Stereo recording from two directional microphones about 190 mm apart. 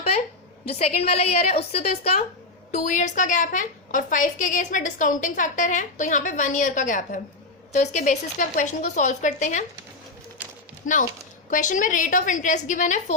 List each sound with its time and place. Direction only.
0.7 s a woman's voice: 30° left (ahead or behind)
11.5 s a woman's voice: 40° left (ahead or behind)